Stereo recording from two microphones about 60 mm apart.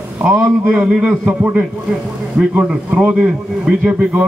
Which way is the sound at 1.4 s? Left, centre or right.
Right.